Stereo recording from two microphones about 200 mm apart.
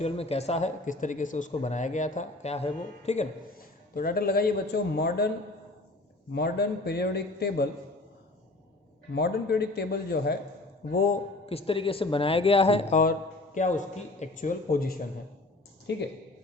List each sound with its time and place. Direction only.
0.0 s speech: 30° left (ahead or behind)
3.9 s a man's voice: 45° left (ahead or behind)
6.3 s a man's voice: 55° left (ahead or behind)
9.1 s a man's voice: 55° left (ahead or behind)
11.4 s speech: 30° left (ahead or behind)
13.0 s speech: 40° left (ahead or behind)
15.9 s speech: 60° left (ahead or behind)